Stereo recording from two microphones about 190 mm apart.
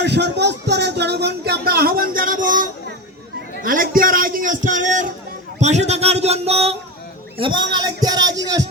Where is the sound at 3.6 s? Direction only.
45° right (ahead or behind); by 8.6 s 20° right (ahead or behind).